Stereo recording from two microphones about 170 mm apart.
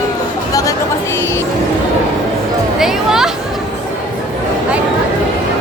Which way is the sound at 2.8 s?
Centre (ahead or behind).